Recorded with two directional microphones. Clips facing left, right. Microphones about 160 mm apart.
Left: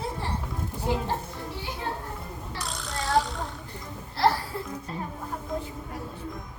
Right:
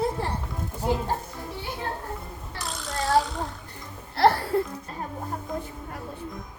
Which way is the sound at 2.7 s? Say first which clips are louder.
Right 5 dB; centre (ahead or behind).